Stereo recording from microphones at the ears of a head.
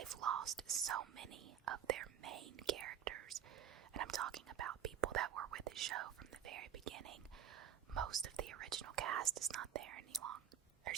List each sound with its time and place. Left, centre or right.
0.0 s speech: right